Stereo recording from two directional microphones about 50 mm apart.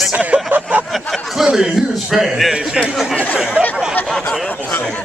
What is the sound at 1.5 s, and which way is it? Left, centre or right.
Speech, centre.